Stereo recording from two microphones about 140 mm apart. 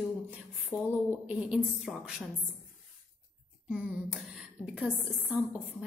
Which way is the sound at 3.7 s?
10° right (ahead or behind).